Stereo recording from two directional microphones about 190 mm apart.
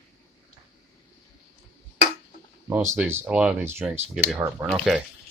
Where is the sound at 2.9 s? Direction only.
10° right (ahead or behind).